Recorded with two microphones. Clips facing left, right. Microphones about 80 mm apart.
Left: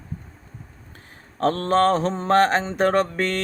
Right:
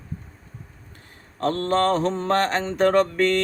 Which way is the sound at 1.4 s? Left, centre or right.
Left.